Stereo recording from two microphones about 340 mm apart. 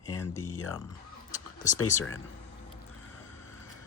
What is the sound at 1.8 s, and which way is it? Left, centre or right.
Speech, left.